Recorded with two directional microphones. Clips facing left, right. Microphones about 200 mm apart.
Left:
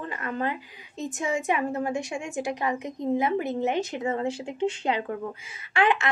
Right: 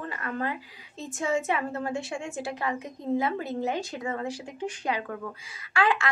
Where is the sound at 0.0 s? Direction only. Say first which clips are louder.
Left 2 dB; 20° left (ahead or behind).